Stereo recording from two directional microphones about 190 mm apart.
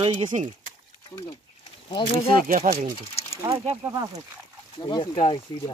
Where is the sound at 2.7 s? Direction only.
40° right (ahead or behind).